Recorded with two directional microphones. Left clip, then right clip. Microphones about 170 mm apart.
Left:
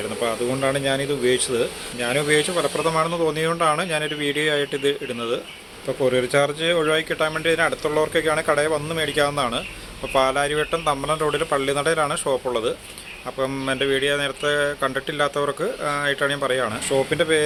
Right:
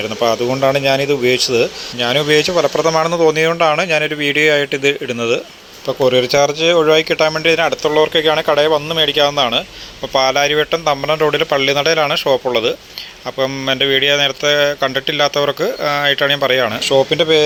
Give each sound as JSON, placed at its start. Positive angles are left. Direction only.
{"t": 0.2, "sound": "speech", "side_deg": -30}